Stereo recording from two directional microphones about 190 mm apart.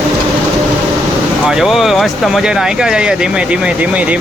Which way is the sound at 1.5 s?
Centre (ahead or behind).